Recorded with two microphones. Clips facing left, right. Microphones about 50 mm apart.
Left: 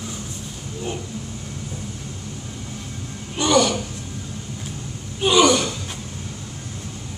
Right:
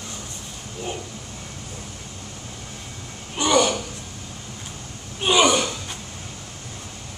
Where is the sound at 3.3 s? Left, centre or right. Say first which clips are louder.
Left 1 dB; centre.